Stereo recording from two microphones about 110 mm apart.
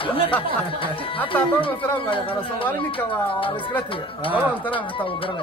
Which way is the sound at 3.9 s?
55° left (ahead or behind).